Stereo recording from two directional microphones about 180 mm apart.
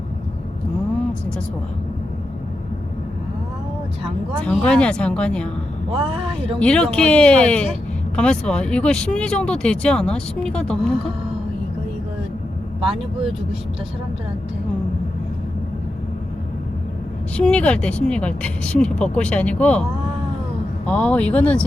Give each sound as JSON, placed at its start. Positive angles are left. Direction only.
{"t": 4.4, "sound": "speech", "side_deg": 5}
{"t": 6.6, "sound": "speech", "side_deg": 5}
{"t": 12.9, "sound": "speech", "side_deg": -30}
{"t": 17.3, "sound": "speech", "side_deg": 5}
{"t": 20.8, "sound": "speech", "side_deg": 5}